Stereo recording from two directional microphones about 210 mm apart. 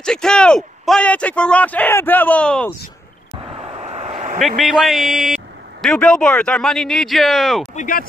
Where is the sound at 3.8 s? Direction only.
30° right (ahead or behind).